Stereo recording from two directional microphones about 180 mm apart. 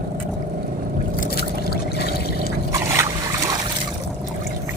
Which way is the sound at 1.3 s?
60° left (ahead or behind).